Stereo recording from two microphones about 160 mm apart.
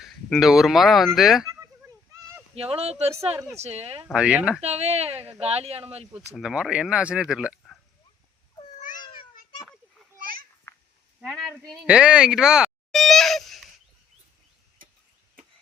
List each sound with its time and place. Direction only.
0.0 s speech: centre (ahead or behind)
2.6 s speech: 40° right (ahead or behind)
4.1 s speech: 5° right (ahead or behind)
4.6 s speech: 40° right (ahead or behind)
6.1 s speech: 5° right (ahead or behind)
8.8 s babbling: 55° left (ahead or behind)
10.7 s a sound: 15° left (ahead or behind)
11.2 s speech: centre (ahead or behind)
14.8 s tick-tock: 60° right (ahead or behind)